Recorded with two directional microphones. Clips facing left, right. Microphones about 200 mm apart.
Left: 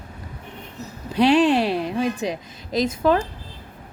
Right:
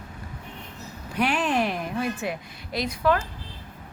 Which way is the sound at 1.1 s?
90° left.